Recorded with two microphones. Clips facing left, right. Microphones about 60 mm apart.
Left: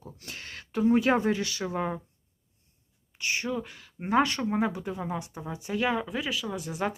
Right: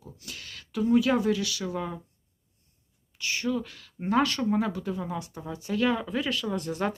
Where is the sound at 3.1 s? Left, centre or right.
Left.